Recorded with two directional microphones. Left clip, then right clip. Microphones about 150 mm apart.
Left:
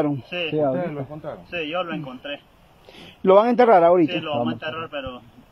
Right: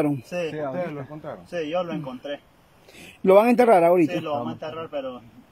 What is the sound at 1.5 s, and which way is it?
Speech, 40° right (ahead or behind).